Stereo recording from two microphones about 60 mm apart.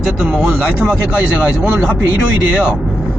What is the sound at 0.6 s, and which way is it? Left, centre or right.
Speech, right.